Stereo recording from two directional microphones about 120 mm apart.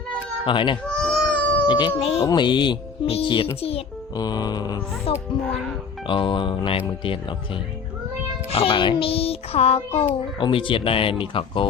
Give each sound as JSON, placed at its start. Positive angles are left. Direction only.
{"t": 0.4, "sound": "a child's voice", "side_deg": 45}
{"t": 0.9, "sound": "a sound", "side_deg": 5}
{"t": 1.6, "sound": "speech", "side_deg": 40}
{"t": 2.0, "sound": "speech", "side_deg": 55}
{"t": 2.2, "sound": "music", "side_deg": 40}
{"t": 3.1, "sound": "a child's voice", "side_deg": 45}
{"t": 4.1, "sound": "music", "side_deg": 35}
{"t": 5.1, "sound": "a child's voice", "side_deg": 55}